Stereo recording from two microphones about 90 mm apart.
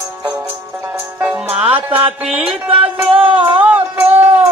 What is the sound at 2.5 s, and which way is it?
Speech, 90° right.